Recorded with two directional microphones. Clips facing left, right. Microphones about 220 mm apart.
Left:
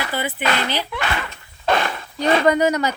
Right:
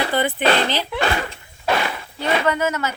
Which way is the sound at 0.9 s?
35° right (ahead or behind).